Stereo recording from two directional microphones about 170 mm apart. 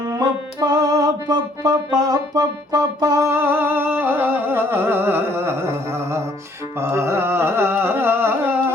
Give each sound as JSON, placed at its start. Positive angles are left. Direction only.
{"t": 0.0, "sound": "music", "side_deg": -20}
{"t": 6.7, "sound": "carnatic music", "side_deg": -15}